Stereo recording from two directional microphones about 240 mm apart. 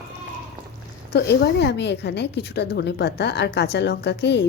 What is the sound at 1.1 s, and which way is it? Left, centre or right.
A woman's voice, left.